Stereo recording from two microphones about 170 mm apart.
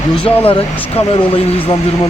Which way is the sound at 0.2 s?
30° left (ahead or behind).